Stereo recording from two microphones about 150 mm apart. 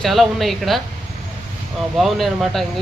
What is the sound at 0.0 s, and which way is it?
Speech, centre (ahead or behind).